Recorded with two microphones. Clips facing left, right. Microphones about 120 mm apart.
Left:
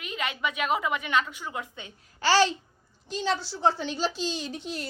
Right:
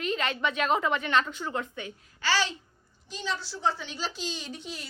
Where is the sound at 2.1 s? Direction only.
35° left (ahead or behind).